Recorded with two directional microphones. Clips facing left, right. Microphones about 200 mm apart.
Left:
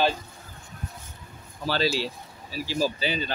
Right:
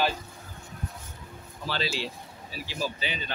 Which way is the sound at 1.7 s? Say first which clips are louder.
Left 6 dB; 40° left (ahead or behind).